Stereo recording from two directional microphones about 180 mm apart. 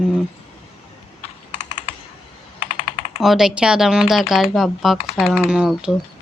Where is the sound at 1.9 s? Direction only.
30° left (ahead or behind).